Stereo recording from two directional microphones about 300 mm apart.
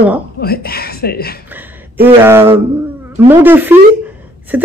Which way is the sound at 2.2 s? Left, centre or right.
Centre.